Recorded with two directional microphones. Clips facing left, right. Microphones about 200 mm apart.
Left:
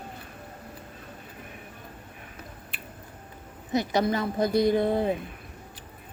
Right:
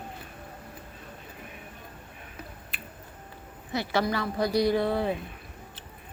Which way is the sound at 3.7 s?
20° left (ahead or behind).